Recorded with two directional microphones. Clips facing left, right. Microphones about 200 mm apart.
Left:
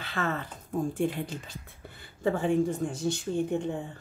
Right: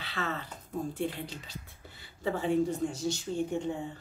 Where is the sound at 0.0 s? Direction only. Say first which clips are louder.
Left 4 dB; 50° left (ahead or behind).